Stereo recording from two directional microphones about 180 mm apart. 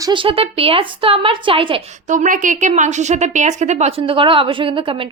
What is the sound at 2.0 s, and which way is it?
A woman's voice, 45° right (ahead or behind).